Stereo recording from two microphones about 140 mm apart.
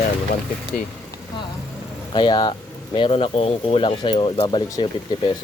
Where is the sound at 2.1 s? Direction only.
35° left (ahead or behind).